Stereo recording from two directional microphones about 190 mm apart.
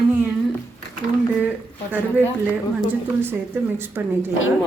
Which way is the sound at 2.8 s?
10° right (ahead or behind).